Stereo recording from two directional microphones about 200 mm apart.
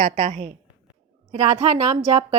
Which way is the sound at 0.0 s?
40° right (ahead or behind).